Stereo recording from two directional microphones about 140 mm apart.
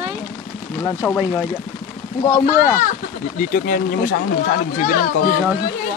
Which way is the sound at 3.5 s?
85° left.